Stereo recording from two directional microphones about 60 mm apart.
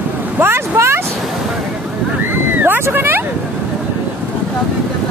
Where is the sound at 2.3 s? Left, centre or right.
Right.